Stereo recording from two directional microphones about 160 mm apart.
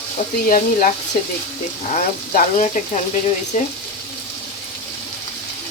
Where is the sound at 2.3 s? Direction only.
50° left (ahead or behind).